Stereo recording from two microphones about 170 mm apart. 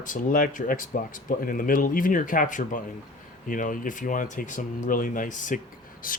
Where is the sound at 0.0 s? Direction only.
50° left (ahead or behind).